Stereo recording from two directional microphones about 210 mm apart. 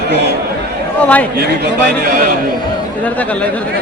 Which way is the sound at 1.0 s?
5° left (ahead or behind).